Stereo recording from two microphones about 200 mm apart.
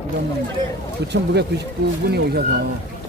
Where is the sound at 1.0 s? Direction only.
60° right (ahead or behind).